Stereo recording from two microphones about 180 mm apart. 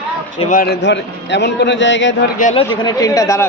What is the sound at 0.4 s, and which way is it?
A man's voice, 50° left (ahead or behind).